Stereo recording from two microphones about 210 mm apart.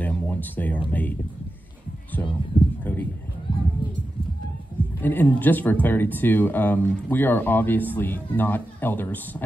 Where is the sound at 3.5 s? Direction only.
25° left (ahead or behind).